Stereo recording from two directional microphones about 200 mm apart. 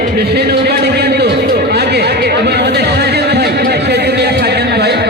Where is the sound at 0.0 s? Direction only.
55° right (ahead or behind).